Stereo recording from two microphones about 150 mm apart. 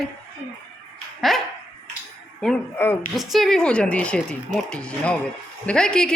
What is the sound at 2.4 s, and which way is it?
Speech, 10° left (ahead or behind).